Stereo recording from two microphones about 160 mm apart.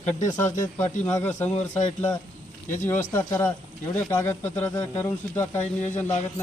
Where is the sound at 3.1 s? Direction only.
15° left (ahead or behind).